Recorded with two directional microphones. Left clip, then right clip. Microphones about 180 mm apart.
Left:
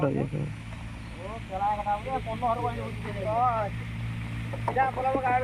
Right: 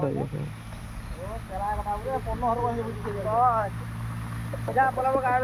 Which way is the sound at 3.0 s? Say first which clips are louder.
Right 3 dB; 50° right (ahead or behind).